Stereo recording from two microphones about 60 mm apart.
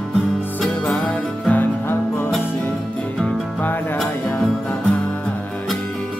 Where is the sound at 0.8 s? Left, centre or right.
Centre.